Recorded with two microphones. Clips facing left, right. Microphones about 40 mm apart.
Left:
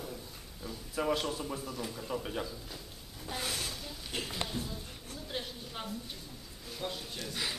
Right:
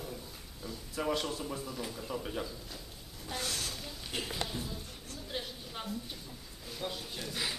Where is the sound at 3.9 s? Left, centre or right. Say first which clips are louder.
Even; centre.